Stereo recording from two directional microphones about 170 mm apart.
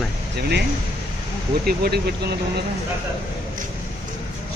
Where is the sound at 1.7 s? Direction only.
65° right (ahead or behind).